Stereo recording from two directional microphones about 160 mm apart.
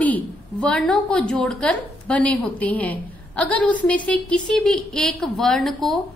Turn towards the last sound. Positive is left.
turn(degrees=0)  # may be behind; listen again after turning